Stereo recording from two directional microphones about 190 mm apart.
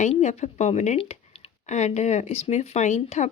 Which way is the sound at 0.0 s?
35° left (ahead or behind).